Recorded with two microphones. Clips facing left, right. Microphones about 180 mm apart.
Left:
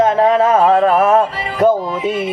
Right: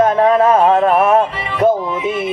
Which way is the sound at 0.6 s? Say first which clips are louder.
Even; 40° left (ahead or behind).